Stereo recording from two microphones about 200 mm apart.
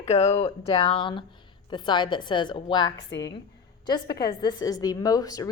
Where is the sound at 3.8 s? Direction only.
20° left (ahead or behind).